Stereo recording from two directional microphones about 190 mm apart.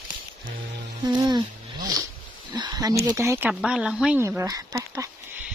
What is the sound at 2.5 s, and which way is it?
Speech, 25° right (ahead or behind).